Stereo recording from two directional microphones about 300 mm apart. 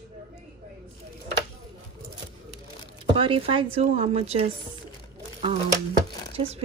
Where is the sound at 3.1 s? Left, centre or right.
Centre.